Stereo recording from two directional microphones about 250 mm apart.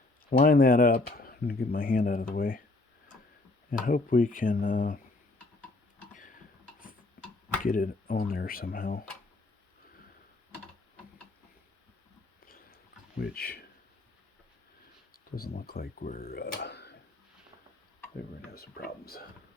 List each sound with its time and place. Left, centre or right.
0.3 s speech: left
3.7 s speech: left
6.1 s a sound: left
7.6 s speech: left
12.5 s a sound: left
15.1 s speech: left
18.5 s speech: left